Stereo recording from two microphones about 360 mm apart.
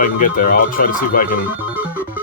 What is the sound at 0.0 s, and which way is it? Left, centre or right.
Speech, left.